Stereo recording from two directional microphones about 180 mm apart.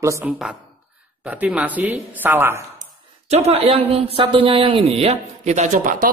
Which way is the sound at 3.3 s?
35° right (ahead or behind).